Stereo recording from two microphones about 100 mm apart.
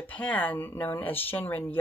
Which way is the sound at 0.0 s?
15° left (ahead or behind).